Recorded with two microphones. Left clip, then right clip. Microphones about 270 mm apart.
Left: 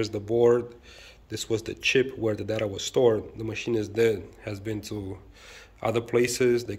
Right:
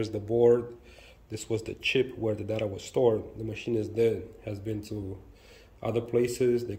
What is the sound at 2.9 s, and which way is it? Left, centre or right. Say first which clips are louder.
Speech: left 3 dB; left.